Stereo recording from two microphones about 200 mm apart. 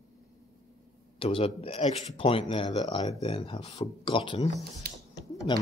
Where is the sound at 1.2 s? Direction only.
25° left (ahead or behind).